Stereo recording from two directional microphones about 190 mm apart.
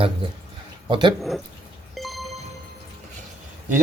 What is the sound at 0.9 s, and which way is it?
Speech, 25° right (ahead or behind).